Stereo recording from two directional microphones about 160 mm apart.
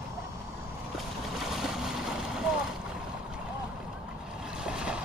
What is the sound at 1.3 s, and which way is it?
Boat, centre (ahead or behind).